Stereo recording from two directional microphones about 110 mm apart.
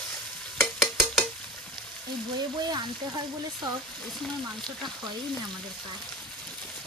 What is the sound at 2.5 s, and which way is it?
Speech, 40° right (ahead or behind).